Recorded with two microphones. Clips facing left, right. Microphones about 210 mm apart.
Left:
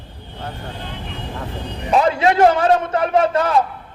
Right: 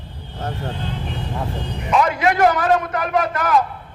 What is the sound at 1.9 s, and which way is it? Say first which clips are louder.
A man's voice: left 2 dB; 30° left (ahead or behind).